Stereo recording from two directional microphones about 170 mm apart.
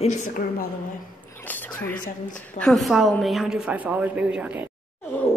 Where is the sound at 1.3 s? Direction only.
10° left (ahead or behind).